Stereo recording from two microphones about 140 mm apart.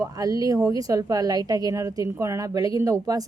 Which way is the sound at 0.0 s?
25° right (ahead or behind).